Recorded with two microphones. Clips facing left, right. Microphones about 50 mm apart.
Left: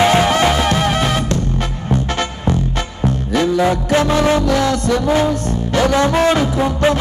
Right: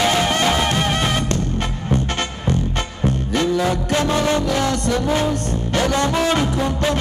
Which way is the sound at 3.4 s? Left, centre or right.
Left.